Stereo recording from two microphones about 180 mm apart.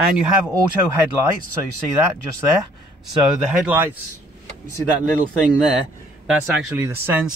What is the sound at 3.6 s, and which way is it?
Speech, 10° right (ahead or behind).